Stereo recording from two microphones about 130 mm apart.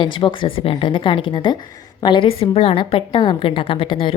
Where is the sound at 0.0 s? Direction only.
40° left (ahead or behind).